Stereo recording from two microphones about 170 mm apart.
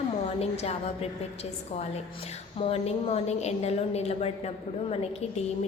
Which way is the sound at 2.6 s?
35° left (ahead or behind).